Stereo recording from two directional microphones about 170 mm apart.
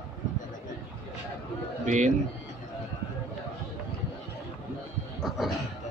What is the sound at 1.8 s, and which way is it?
Speech, 45° right (ahead or behind).